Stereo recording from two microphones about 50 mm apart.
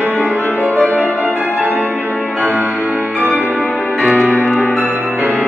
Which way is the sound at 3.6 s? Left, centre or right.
Left.